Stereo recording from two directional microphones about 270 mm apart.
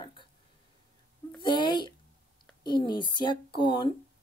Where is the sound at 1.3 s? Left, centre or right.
Centre.